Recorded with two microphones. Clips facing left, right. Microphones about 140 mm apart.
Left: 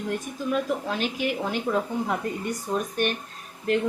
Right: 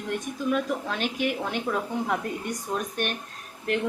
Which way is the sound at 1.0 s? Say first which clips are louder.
Even; 55° right (ahead or behind).